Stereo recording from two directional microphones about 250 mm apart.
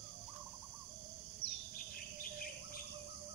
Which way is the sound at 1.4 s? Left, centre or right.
Left.